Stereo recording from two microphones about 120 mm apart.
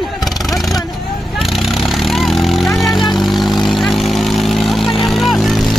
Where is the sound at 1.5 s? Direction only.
Centre (ahead or behind).